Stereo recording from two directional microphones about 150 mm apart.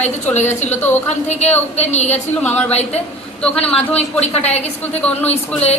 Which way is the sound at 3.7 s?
40° left (ahead or behind).